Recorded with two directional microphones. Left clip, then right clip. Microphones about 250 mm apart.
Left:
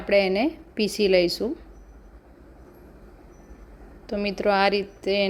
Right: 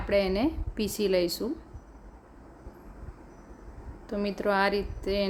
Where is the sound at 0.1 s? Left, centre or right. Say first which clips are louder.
Left 5 dB; centre.